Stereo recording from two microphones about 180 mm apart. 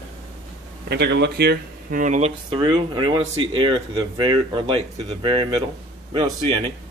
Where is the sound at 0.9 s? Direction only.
70° right (ahead or behind); by 2.3 s 40° right (ahead or behind).